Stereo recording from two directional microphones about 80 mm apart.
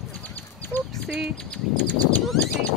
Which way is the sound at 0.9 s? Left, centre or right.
Centre.